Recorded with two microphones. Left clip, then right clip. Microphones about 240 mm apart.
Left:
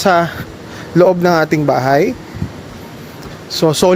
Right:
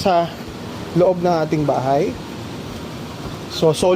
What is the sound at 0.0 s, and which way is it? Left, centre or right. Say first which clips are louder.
Speech: left 5 dB; left.